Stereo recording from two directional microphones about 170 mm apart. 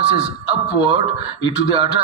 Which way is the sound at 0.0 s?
30° right (ahead or behind).